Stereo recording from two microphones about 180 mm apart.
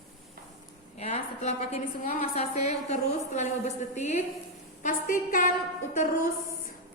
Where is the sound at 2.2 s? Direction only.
35° left (ahead or behind).